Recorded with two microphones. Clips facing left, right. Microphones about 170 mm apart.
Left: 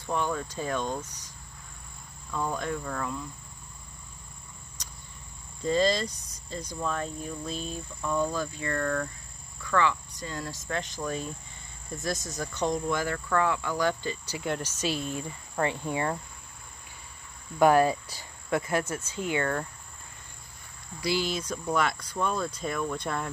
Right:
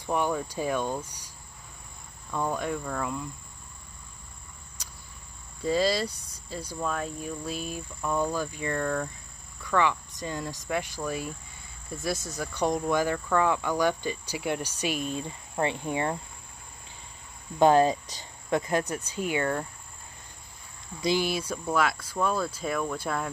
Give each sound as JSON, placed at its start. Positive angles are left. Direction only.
{"t": 0.0, "sound": "speech", "side_deg": -15}
{"t": 2.3, "sound": "speech", "side_deg": -10}
{"t": 5.6, "sound": "speech", "side_deg": -5}
{"t": 17.6, "sound": "speech", "side_deg": -25}
{"t": 21.0, "sound": "speech", "side_deg": -15}